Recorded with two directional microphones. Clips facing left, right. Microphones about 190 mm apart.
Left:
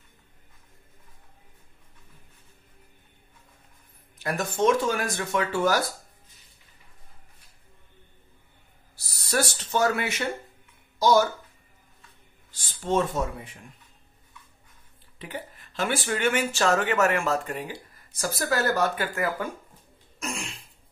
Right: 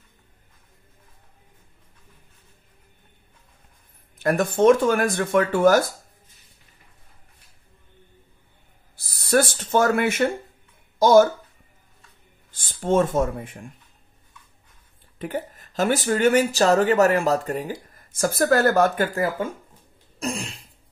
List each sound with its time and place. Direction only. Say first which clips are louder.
4.2 s speech: right 7 dB; 55° right (ahead or behind)
8.9 s speech: right 7 dB; 55° right (ahead or behind)
12.4 s speech: right 5 dB; 50° right (ahead or behind)
15.1 s speech: right 8 dB; 50° right (ahead or behind)
19.1 s speech: right 4 dB; 30° right (ahead or behind)
20.2 s throat clearing: right 6 dB; 35° right (ahead or behind)